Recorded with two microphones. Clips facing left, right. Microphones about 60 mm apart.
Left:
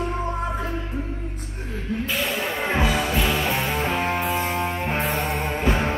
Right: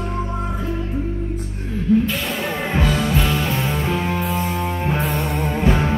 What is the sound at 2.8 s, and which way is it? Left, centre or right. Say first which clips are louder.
Music: right 3 dB; centre.